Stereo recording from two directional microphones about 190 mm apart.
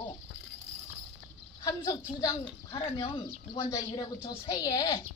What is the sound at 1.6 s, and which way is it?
A woman's voice, 20° left (ahead or behind).